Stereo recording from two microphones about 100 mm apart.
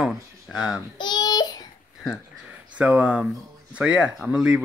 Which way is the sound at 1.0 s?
45° left (ahead or behind).